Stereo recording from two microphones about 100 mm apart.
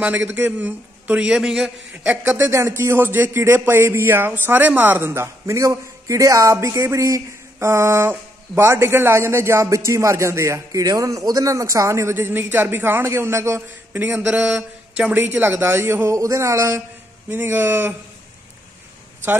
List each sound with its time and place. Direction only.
0.0 s a man's voice: 15° right (ahead or behind)
2.3 s speech: 30° right (ahead or behind)